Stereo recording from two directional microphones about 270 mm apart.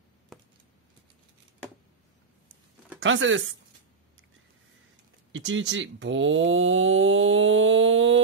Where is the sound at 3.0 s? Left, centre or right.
Right.